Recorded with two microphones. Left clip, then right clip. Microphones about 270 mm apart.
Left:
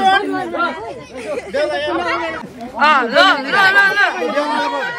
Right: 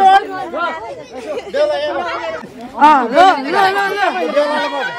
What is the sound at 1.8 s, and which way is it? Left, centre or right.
Speech, right.